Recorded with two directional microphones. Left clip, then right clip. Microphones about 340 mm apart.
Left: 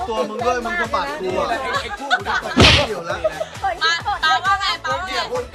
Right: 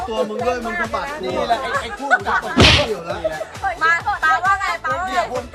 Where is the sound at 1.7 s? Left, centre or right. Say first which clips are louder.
Right 2 dB; centre.